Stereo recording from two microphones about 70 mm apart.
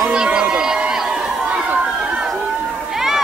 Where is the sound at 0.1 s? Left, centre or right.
Centre.